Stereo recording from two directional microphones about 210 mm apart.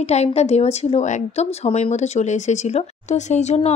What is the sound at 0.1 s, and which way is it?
A woman's voice, 30° left (ahead or behind).